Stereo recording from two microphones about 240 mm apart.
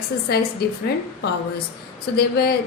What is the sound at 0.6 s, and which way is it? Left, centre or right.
Speech, left.